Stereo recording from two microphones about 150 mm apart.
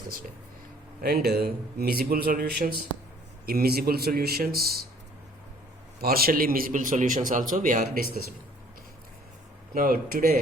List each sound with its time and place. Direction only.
1.0 s a man's voice: 90° right
6.0 s a man's voice: 90° right; by 7.9 s 65° right (ahead or behind)
9.7 s speech: 75° right (ahead or behind)